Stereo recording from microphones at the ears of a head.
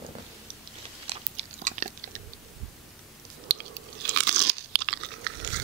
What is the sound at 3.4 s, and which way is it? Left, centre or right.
Crunch, right.